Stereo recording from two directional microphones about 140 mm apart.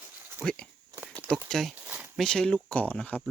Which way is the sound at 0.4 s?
10° left (ahead or behind).